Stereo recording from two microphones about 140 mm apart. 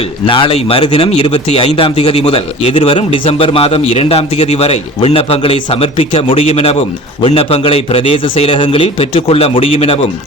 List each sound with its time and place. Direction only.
0.3 s a man's voice: 40° left (ahead or behind)